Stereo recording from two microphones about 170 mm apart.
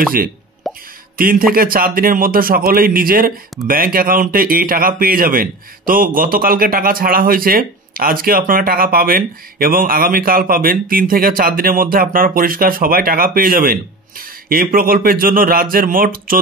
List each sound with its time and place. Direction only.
0.7 s plop: centre (ahead or behind)
1.1 s a man's voice: 55° right (ahead or behind)